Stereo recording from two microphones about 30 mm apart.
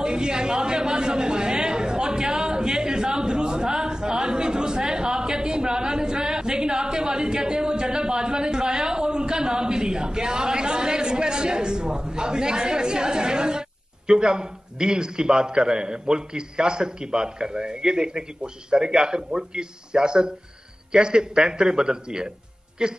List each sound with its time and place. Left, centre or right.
0.0 s a man's voice: right